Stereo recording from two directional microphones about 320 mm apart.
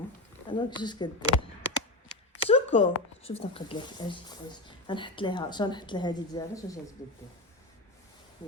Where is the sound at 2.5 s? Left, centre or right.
Centre.